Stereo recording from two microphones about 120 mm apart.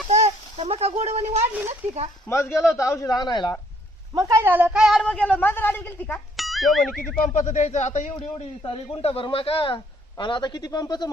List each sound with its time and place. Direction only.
0.1 s a sound: 65° right (ahead or behind)
2.3 s a man's voice: 25° left (ahead or behind)
4.1 s speech: 30° right (ahead or behind)
4.4 s speech: 15° right (ahead or behind)
5.0 s a woman's voice: 10° left (ahead or behind)
6.3 s speech: centre (ahead or behind)
7.3 s a man's voice: 85° left; by 11.1 s 35° left (ahead or behind)